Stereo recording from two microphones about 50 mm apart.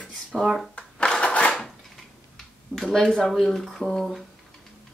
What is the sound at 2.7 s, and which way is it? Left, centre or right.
Speech, right.